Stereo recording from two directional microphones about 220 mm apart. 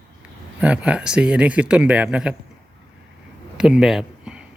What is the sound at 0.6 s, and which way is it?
Speech, 5° right (ahead or behind).